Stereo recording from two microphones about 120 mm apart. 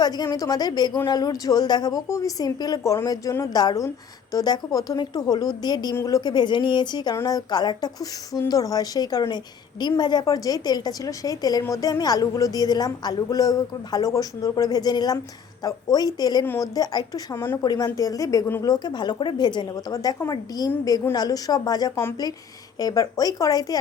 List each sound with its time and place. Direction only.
0.0 s speech: 35° left (ahead or behind)
17.3 s speech: 20° left (ahead or behind)
17.6 s speech: 35° left (ahead or behind)
18.6 s speech: 35° left (ahead or behind)